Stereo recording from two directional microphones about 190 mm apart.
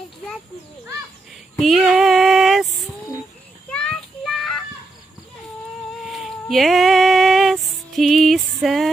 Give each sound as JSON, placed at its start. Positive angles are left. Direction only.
{"t": 1.6, "sound": "female singing", "side_deg": 0}
{"t": 3.7, "sound": "child singing", "side_deg": 0}
{"t": 6.0, "sound": "music", "side_deg": 0}